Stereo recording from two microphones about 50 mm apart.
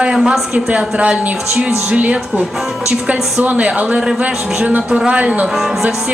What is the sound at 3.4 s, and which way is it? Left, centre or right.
Speech, right.